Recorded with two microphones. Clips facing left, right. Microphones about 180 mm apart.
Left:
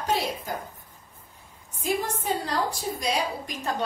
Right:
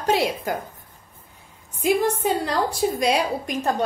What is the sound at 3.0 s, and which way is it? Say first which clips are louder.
Speech: right 6 dB; 75° right (ahead or behind).